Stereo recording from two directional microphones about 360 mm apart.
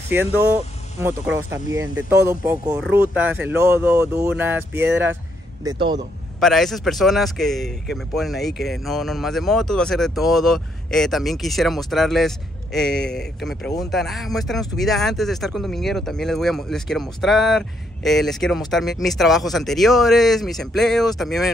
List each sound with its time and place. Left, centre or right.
0.1 s speech: centre
4.8 s speech: right
5.6 s a man's voice: centre
6.4 s speech: centre